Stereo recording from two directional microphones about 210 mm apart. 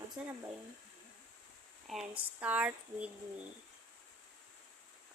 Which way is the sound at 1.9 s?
Centre (ahead or behind).